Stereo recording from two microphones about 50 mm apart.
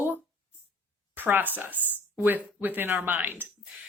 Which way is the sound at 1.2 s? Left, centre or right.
Right.